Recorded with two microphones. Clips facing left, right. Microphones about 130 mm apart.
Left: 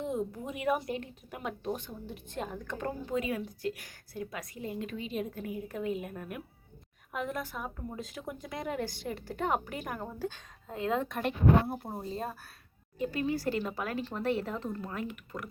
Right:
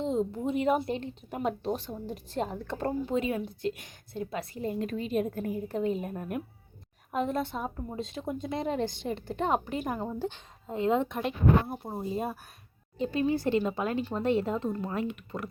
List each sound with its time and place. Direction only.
0.0 s speech: 25° right (ahead or behind); by 5.5 s 45° right (ahead or behind)
5.6 s a woman's voice: 30° right (ahead or behind)
11.7 s speech: 5° right (ahead or behind)
13.0 s a woman's voice: 25° right (ahead or behind)